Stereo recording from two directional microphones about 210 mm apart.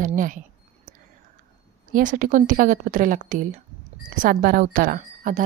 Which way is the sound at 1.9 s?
40° right (ahead or behind).